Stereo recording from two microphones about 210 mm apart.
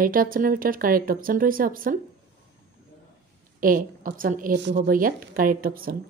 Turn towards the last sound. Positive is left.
turn(degrees=-45)  # may be behind; listen again after turning